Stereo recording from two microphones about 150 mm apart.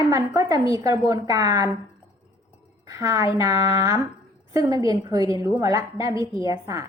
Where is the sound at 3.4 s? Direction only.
20° right (ahead or behind).